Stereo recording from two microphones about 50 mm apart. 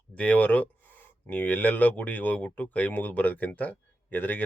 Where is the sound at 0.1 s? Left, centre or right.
Left.